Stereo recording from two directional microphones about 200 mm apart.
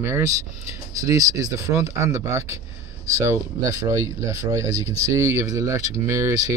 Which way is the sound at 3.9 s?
15° right (ahead or behind).